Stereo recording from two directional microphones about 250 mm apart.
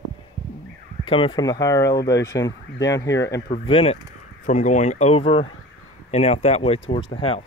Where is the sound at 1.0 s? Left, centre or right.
Left.